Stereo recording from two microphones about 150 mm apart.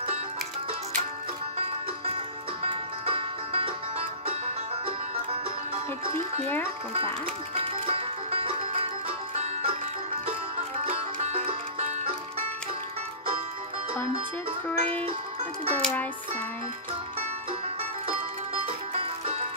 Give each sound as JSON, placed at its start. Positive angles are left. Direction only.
{"t": 2.6, "sound": "music", "side_deg": -35}
{"t": 6.0, "sound": "speech", "side_deg": -35}
{"t": 7.6, "sound": "music", "side_deg": -40}
{"t": 10.9, "sound": "music", "side_deg": -45}
{"t": 14.7, "sound": "music", "side_deg": 10}